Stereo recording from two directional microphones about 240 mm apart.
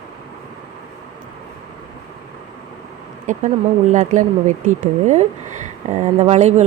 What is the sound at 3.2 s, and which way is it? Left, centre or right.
Speech, right.